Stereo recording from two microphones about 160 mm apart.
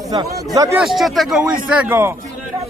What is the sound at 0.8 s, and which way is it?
A man's voice, centre (ahead or behind).